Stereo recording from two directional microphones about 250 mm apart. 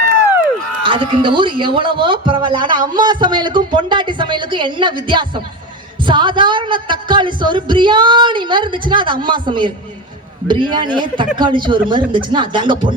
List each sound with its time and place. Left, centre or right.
0.8 s a woman's voice: centre